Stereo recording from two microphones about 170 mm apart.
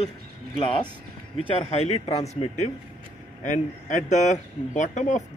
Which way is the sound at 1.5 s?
35° left (ahead or behind).